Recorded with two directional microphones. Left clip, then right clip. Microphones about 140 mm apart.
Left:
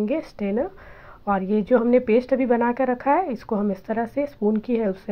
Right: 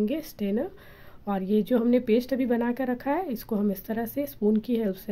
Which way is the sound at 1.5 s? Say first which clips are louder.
Left 5 dB; 40° right (ahead or behind).